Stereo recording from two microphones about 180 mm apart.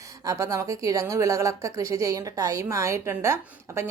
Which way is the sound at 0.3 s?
20° right (ahead or behind).